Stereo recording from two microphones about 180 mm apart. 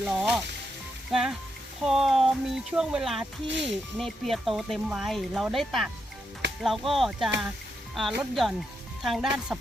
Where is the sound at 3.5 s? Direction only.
80° right.